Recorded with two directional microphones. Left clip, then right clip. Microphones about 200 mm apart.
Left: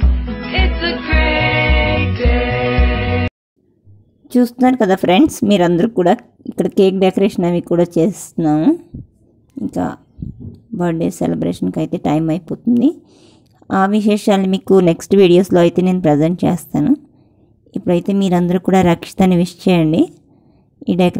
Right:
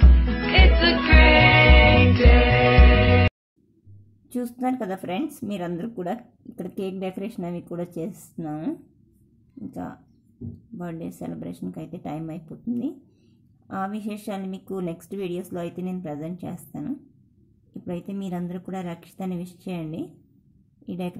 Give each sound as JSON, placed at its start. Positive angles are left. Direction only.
{"t": 0.0, "sound": "music", "side_deg": 0}
{"t": 4.3, "sound": "speech", "side_deg": 30}